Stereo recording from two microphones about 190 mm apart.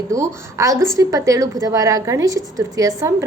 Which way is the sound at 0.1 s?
15° right (ahead or behind).